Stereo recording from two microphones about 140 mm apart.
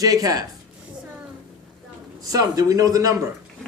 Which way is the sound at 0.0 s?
25° right (ahead or behind).